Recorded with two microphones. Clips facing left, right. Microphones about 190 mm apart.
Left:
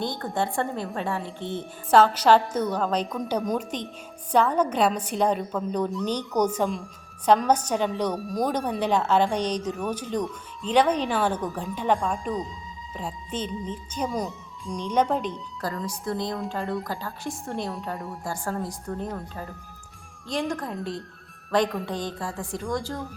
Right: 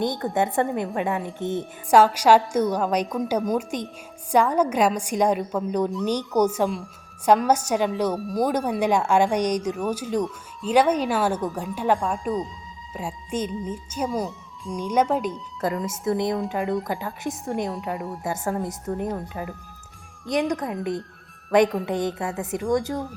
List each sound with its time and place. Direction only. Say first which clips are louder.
0.0 s a woman's voice: right 4 dB; 20° right (ahead or behind)
15.6 s a woman's voice: right 6 dB; 20° right (ahead or behind); by 18.2 s centre (ahead or behind)
18.2 s a woman's voice: right 3 dB; 20° right (ahead or behind)
21.5 s a woman's voice: right 5 dB; 20° right (ahead or behind)